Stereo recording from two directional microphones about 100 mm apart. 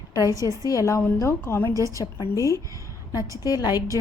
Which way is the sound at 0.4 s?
35° left (ahead or behind).